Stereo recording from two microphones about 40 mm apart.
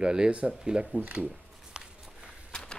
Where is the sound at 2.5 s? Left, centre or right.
Left.